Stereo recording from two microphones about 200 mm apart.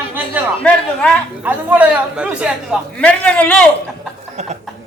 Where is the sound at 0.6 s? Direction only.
5° left (ahead or behind).